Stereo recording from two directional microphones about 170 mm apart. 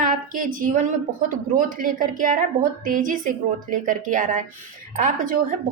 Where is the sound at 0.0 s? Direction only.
55° right (ahead or behind).